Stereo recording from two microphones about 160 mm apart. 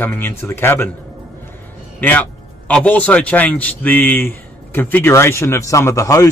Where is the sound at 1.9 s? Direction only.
10° left (ahead or behind).